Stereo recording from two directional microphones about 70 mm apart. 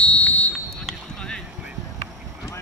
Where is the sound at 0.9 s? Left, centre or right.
Centre.